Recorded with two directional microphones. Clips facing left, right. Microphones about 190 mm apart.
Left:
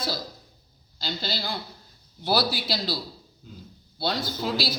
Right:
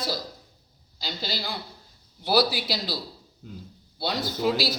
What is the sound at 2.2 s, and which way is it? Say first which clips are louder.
Speech: right 2 dB; 15° right (ahead or behind).